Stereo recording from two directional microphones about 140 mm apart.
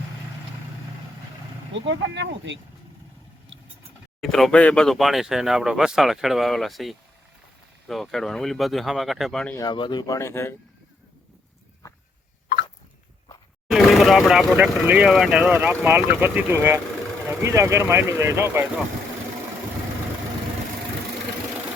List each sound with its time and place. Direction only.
4.2 s speech: centre (ahead or behind)
9.6 s speech: 35° left (ahead or behind); by 10.5 s 20° left (ahead or behind)
13.7 s vehicle: centre (ahead or behind)
14.5 s speech: 15° right (ahead or behind)